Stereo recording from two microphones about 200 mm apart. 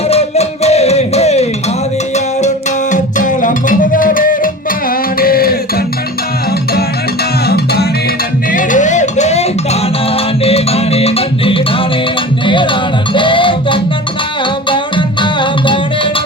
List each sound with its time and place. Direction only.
0.1 s music: 30° left (ahead or behind)
2.9 s music: 40° left (ahead or behind)
7.4 s music: 55° left (ahead or behind)
8.5 s music: 40° left (ahead or behind); by 15.8 s 25° left (ahead or behind)